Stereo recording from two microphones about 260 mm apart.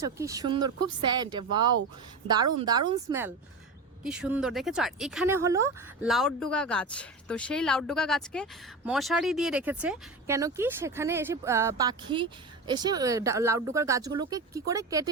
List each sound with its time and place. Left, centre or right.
0.0 s speech: centre
6.1 s speech: centre